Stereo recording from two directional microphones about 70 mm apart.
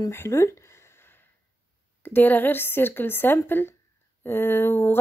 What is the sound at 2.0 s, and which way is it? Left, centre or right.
Speech, left.